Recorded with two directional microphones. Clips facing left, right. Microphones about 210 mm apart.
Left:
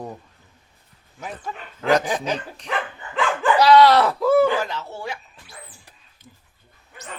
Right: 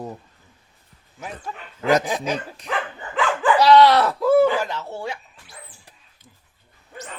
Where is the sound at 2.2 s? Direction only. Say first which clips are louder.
Even; 5° right (ahead or behind).